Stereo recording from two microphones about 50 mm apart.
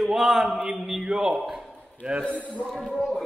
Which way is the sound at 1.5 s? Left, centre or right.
Right.